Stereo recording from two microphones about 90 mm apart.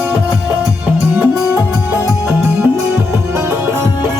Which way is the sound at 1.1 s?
20° right (ahead or behind).